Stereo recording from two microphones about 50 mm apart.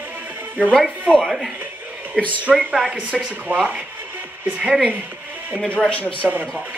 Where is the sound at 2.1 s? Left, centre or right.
Right.